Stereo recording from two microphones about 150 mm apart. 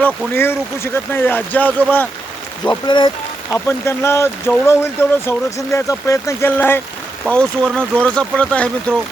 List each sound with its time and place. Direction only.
0.0 s speech: 15° left (ahead or behind)
2.6 s speech: 30° left (ahead or behind)
3.5 s speech: 15° left (ahead or behind)